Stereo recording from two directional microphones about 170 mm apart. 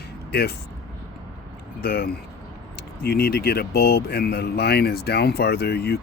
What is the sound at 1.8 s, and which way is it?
Speech, 65° left (ahead or behind).